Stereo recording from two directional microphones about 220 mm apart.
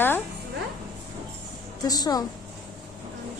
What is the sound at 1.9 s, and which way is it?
Speech, 15° left (ahead or behind).